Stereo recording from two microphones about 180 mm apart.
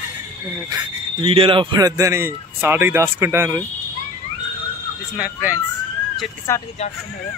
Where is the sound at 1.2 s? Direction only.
30° right (ahead or behind); by 3.6 s 15° right (ahead or behind).